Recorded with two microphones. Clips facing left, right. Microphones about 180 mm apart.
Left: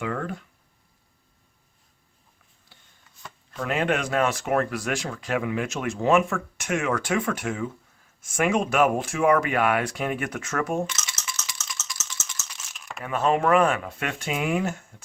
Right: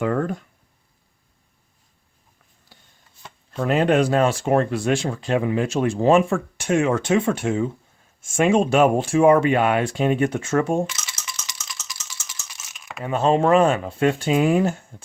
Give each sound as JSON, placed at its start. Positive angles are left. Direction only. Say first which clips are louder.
{"t": 0.0, "sound": "speech", "louder": "right 7 dB", "side_deg": -45}
{"t": 3.2, "sound": "speech", "louder": "right 6 dB", "side_deg": -30}
{"t": 10.8, "sound": "coin", "louder": "right 1 dB", "side_deg": -10}
{"t": 12.4, "sound": "typing", "louder": "left 1 dB", "side_deg": -5}
{"t": 13.0, "sound": "speech", "louder": "right 4 dB", "side_deg": -25}